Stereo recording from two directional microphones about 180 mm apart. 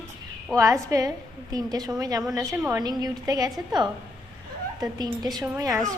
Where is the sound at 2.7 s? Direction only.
20° right (ahead or behind).